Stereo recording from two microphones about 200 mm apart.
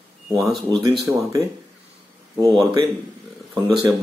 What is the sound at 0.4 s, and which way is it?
Speech, centre (ahead or behind).